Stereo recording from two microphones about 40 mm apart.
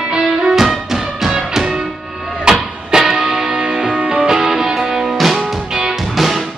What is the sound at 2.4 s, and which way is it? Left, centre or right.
Music, centre.